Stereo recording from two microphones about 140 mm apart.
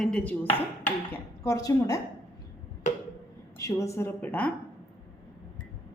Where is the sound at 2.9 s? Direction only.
60° left (ahead or behind).